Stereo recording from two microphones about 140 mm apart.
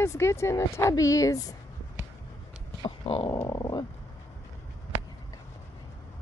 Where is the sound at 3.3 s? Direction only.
30° left (ahead or behind).